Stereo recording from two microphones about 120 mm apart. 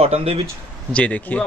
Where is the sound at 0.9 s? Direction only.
10° left (ahead or behind).